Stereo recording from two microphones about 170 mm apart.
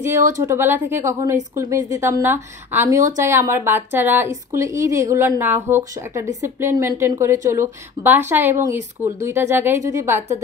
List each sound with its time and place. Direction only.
0.3 s a woman's voice: 15° right (ahead or behind)
8.6 s speech: 45° right (ahead or behind)
9.2 s a woman's voice: 15° right (ahead or behind)